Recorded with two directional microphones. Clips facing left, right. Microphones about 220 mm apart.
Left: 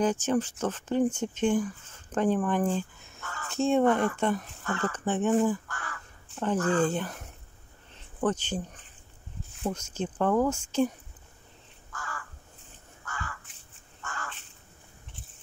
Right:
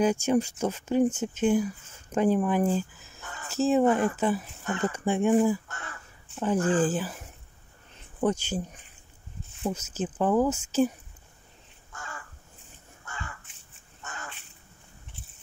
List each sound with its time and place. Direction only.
0.0 s speech: 10° right (ahead or behind)
3.2 s a sound: 20° right (ahead or behind)
3.4 s speech: 5° right (ahead or behind)
4.6 s speech: 20° right (ahead or behind)
5.7 s speech: 25° right (ahead or behind)
6.8 s speech: 5° right (ahead or behind)
11.9 s crow: 25° right (ahead or behind)
13.0 s a sound: 20° right (ahead or behind)
14.0 s fowl: 20° right (ahead or behind)